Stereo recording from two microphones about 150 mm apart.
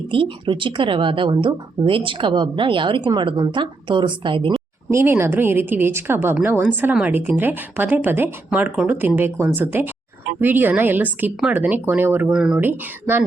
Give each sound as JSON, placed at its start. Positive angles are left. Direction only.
{"t": 0.1, "sound": "speech", "side_deg": -35}
{"t": 4.9, "sound": "a woman's voice", "side_deg": -15}